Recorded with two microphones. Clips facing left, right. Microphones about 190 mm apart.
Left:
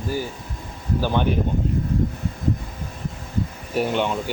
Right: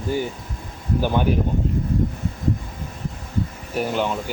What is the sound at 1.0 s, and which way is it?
Speech, 10° right (ahead or behind).